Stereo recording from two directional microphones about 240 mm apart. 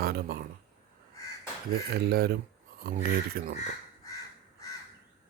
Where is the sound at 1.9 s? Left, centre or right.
Right.